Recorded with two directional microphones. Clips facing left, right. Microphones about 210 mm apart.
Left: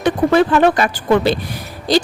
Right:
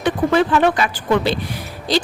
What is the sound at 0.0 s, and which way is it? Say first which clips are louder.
A woman's voice: left 3 dB; 45° left (ahead or behind).